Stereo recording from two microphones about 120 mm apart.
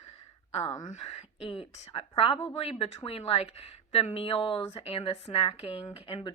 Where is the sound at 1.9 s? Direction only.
50° left (ahead or behind).